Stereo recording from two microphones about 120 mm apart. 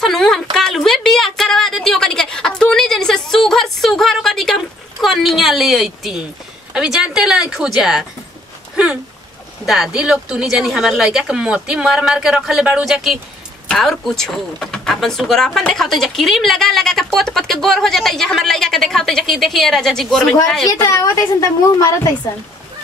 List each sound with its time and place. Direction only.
0.0 s a sound: 5° left (ahead or behind)
5.0 s a woman's voice: centre (ahead or behind)
9.7 s speech: 5° right (ahead or behind)
20.6 s a woman's voice: 30° left (ahead or behind)